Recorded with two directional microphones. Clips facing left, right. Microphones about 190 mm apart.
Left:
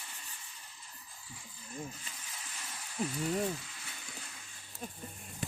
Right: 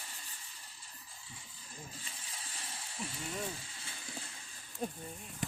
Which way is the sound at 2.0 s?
30° right (ahead or behind).